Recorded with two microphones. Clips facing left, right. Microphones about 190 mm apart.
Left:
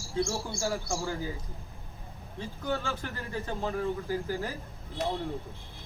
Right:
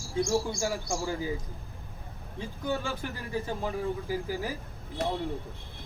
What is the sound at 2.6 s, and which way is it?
Speech, 15° right (ahead or behind).